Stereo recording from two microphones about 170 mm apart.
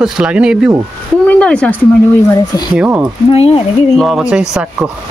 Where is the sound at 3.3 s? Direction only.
35° left (ahead or behind).